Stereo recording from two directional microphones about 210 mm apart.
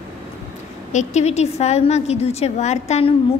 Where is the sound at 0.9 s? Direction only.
30° left (ahead or behind).